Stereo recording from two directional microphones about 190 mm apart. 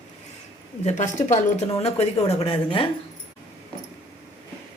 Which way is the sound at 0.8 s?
40° left (ahead or behind).